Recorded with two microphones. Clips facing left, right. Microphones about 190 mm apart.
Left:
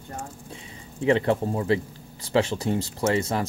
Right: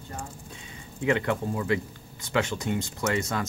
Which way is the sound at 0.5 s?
30° left (ahead or behind).